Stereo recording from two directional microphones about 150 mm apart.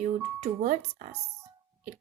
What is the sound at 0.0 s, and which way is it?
Speech, 45° right (ahead or behind).